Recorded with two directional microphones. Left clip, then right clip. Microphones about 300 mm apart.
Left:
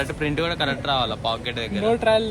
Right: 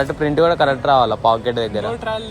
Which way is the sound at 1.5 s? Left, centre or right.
Centre.